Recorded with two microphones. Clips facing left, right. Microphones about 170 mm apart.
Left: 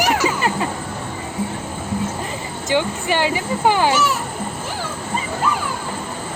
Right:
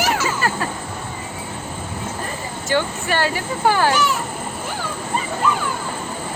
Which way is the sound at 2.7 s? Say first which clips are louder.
Left 1 dB; 15° left (ahead or behind).